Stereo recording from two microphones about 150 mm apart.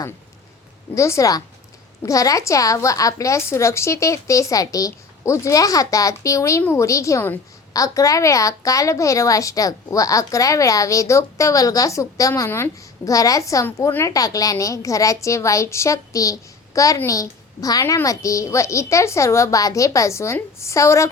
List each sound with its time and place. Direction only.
0.9 s a woman's voice: 20° left (ahead or behind)